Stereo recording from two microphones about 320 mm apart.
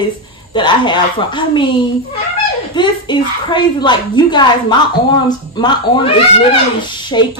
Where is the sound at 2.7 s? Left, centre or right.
Centre.